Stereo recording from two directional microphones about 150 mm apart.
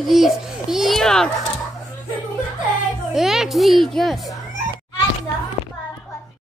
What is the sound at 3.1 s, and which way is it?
Speech, 5° right (ahead or behind).